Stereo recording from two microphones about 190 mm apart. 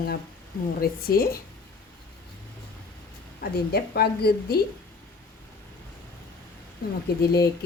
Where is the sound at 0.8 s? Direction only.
50° left (ahead or behind).